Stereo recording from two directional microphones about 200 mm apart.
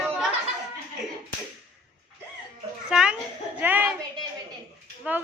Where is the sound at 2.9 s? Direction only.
5° right (ahead or behind).